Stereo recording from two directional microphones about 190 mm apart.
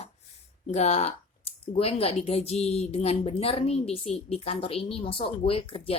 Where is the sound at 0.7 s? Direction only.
35° left (ahead or behind).